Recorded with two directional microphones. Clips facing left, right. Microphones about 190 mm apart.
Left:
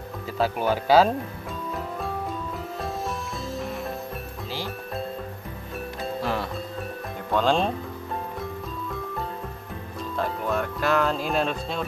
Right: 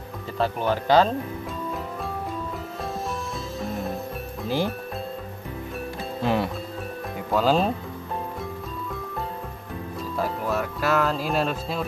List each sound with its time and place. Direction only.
0.4 s speech: 10° left (ahead or behind)
6.2 s music: 15° right (ahead or behind)
7.2 s speech: 5° right (ahead or behind)
10.1 s speech: 5° right (ahead or behind)